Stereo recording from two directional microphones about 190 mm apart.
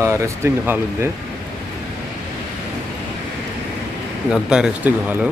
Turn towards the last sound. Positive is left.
turn(degrees=-10)  # may be behind; listen again after turning